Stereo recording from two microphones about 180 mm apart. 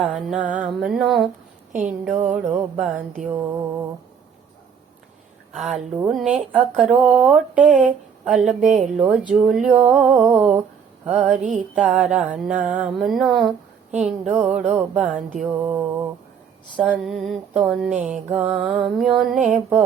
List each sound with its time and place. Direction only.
0.0 s speech: 5° right (ahead or behind)
1.7 s speech: 45° right (ahead or behind)
2.0 s speech: 5° right (ahead or behind)
3.2 s speech: 15° right (ahead or behind)
5.7 s speech: 5° right (ahead or behind)
16.7 s speech: centre (ahead or behind)